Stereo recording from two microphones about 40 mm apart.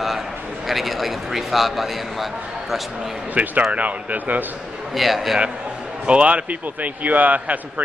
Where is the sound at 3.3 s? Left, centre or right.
Right.